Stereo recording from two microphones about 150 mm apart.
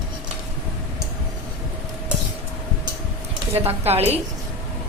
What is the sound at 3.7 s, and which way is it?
Speech, 45° right (ahead or behind).